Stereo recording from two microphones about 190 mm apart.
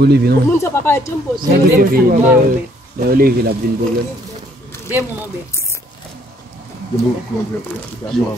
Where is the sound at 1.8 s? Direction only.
50° right (ahead or behind).